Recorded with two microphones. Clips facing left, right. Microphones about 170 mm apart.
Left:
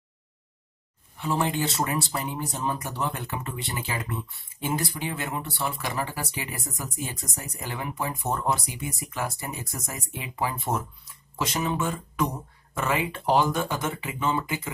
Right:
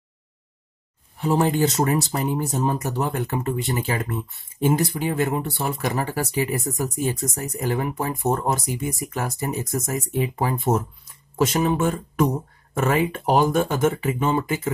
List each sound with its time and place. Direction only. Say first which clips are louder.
1.1 s speech: right 6 dB; 40° right (ahead or behind)